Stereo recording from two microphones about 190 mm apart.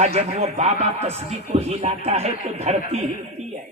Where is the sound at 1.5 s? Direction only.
30° right (ahead or behind).